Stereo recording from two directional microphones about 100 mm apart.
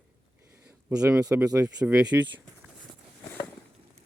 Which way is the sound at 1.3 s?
10° right (ahead or behind).